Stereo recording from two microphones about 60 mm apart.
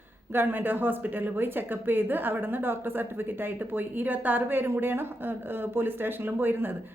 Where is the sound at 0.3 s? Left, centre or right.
Right.